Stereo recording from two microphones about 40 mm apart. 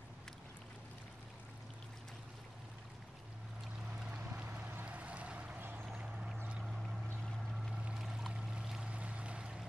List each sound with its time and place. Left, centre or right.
4.8 s boat: right
8.0 s boat: centre
8.8 s a sound: right